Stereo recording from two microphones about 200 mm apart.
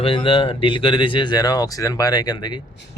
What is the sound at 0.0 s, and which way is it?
Speech, 25° left (ahead or behind).